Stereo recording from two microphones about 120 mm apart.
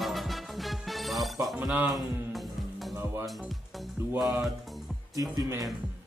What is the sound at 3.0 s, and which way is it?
Speech, 20° right (ahead or behind).